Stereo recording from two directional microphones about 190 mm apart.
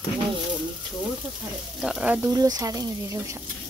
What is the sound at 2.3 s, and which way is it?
Speech, 20° right (ahead or behind).